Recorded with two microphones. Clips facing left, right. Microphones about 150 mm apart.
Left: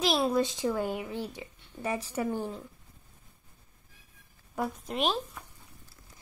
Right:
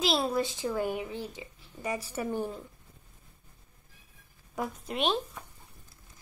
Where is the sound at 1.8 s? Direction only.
10° right (ahead or behind).